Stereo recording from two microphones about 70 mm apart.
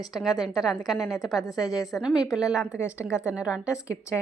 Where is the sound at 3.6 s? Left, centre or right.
Left.